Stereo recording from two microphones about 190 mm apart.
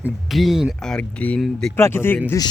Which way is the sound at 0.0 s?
Centre (ahead or behind).